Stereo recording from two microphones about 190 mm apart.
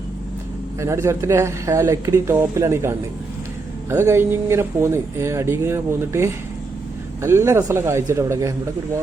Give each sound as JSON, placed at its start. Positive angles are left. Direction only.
{"t": 0.8, "sound": "speech", "side_deg": -15}